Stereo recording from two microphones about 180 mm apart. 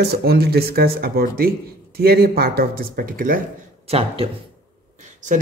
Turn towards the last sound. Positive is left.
turn(degrees=-45)  # may be behind; listen again after turning